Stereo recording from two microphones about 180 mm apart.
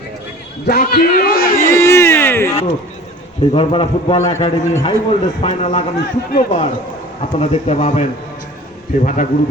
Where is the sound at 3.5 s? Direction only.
30° left (ahead or behind).